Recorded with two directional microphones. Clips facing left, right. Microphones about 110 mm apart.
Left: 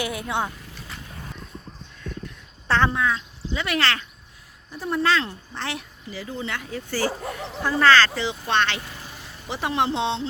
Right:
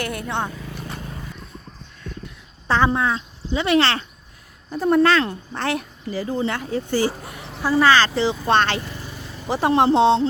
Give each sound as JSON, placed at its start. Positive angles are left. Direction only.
{"t": 0.0, "sound": "speech", "side_deg": 5}
{"t": 2.6, "sound": "speech", "side_deg": -10}
{"t": 2.9, "sound": "speech", "side_deg": -30}
{"t": 4.7, "sound": "speech", "side_deg": -55}
{"t": 7.6, "sound": "speech", "side_deg": -10}
{"t": 8.1, "sound": "speech", "side_deg": -35}